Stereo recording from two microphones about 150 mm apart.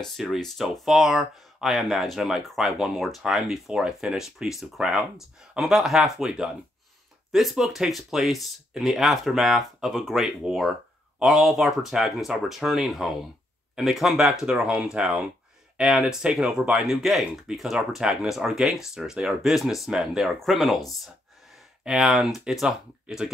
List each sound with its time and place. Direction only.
0.0 s speech: centre (ahead or behind)
21.8 s speech: 5° right (ahead or behind)